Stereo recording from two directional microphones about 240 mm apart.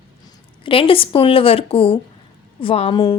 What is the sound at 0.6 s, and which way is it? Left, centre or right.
A woman's voice, left.